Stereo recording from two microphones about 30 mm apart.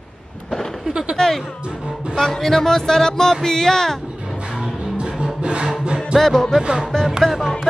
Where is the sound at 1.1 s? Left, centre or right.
Centre.